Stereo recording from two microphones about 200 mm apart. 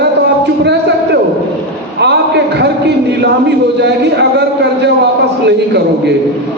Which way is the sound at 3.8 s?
60° right (ahead or behind).